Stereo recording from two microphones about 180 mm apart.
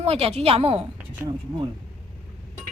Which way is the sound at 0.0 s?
35° right (ahead or behind).